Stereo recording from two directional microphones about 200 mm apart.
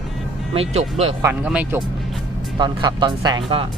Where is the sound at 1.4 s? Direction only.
5° right (ahead or behind).